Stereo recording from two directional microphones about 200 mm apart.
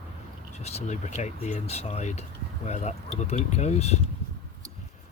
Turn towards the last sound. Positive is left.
turn(degrees=35)  # may be behind; listen again after turning